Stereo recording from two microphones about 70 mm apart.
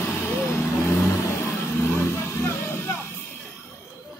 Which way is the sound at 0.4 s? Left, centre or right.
Left.